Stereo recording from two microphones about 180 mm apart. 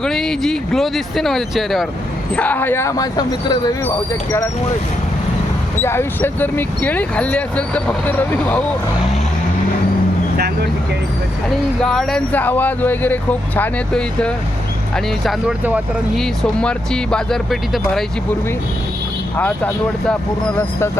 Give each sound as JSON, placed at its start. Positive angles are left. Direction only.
{"t": 0.0, "sound": "speech", "side_deg": 5}
{"t": 5.8, "sound": "speech", "side_deg": 15}
{"t": 10.3, "sound": "vehicle", "side_deg": -65}
{"t": 11.8, "sound": "speech", "side_deg": 0}
{"t": 19.4, "sound": "speech", "side_deg": 10}